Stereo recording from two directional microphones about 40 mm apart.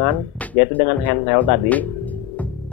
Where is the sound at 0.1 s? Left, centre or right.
Left.